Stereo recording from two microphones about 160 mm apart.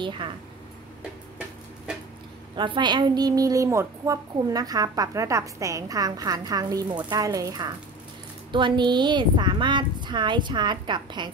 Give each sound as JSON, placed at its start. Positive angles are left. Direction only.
{"t": 2.5, "sound": "a woman's voice", "side_deg": -30}